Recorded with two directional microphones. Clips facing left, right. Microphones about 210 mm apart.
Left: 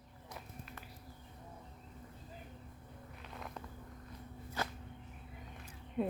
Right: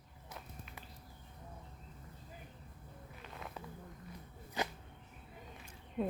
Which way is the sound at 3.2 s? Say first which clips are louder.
Even; centre (ahead or behind).